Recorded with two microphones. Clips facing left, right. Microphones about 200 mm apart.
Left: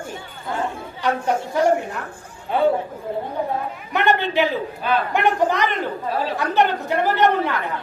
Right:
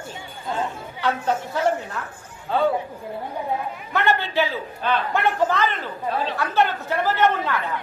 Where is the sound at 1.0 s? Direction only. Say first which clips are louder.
Left 2 dB; 15° left (ahead or behind).